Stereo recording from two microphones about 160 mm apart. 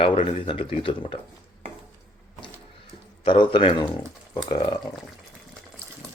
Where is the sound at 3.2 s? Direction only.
30° left (ahead or behind).